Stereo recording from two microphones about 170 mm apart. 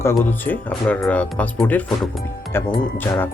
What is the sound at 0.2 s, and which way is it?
Speech, 10° left (ahead or behind).